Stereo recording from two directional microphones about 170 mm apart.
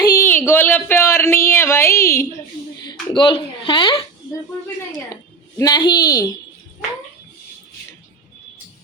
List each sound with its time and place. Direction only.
0.0 s a sound: 15° left (ahead or behind)
3.2 s speech: 30° left (ahead or behind)
5.5 s speech: 25° left (ahead or behind)